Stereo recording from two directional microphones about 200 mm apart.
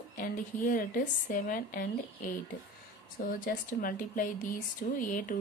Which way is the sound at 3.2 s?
45° left (ahead or behind).